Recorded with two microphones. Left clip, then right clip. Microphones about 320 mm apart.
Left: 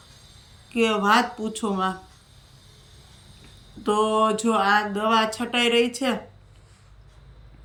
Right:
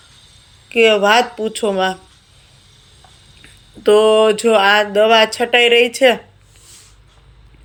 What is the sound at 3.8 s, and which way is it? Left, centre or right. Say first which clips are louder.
Speech: right 10 dB; centre.